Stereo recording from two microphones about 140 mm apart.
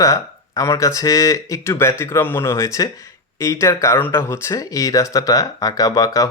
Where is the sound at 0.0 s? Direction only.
20° left (ahead or behind).